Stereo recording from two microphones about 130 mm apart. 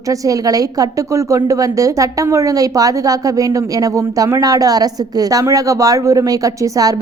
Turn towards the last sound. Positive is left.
turn(degrees=-25)  # may be behind; listen again after turning